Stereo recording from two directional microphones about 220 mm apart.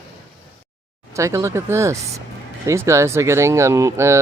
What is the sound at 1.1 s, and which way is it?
Speech, 15° right (ahead or behind).